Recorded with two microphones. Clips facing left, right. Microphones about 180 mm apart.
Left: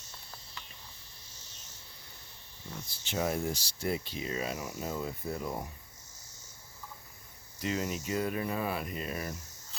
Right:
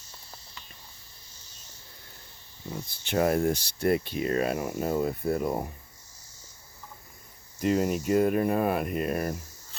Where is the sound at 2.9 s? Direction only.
60° right (ahead or behind).